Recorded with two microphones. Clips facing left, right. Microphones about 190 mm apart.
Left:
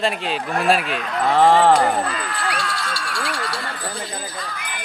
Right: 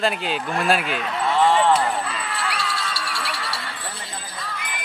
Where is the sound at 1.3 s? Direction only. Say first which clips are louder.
Left 4 dB; 65° left (ahead or behind).